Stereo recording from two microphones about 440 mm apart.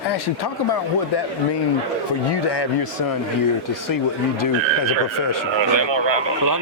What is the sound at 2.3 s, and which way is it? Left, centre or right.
Speech, left.